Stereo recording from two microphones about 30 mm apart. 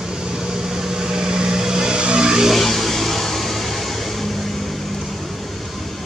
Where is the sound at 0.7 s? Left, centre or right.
Centre.